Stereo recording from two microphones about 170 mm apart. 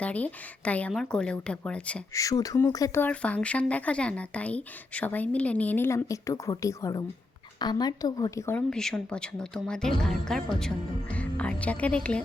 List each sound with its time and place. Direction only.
0.0 s speech: 10° left (ahead or behind)
2.1 s speech: 20° left (ahead or behind)